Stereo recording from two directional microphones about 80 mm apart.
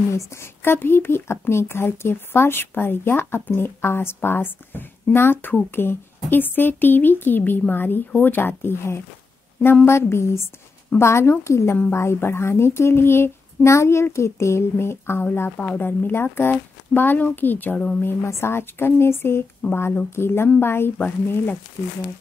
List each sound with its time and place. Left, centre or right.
0.1 s speech: left
15.5 s speech: centre